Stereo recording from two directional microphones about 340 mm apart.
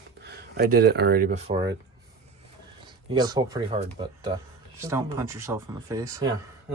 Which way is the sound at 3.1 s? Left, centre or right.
Centre.